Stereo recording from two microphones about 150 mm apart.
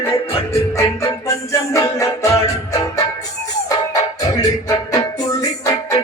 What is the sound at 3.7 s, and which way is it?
Music, 25° left (ahead or behind).